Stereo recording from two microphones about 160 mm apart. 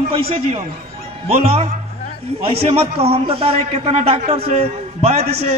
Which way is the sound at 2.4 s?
40° right (ahead or behind).